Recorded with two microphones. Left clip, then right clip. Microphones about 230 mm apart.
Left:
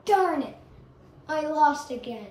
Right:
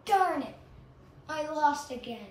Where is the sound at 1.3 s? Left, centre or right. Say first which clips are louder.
Left 6 dB; centre.